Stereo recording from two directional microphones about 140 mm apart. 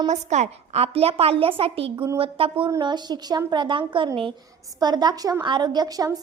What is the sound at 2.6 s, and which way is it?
A woman's voice, 30° right (ahead or behind).